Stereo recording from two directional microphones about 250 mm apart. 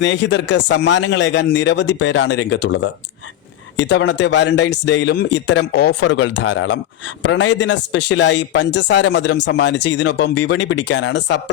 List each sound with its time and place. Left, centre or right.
0.0 s a man's voice: left